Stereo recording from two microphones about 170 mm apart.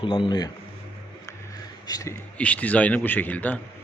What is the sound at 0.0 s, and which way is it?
Speech, 30° left (ahead or behind).